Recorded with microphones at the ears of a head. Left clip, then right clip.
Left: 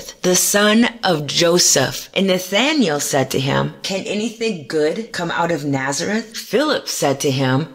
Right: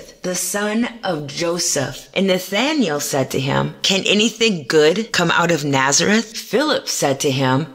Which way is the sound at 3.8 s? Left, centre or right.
Right.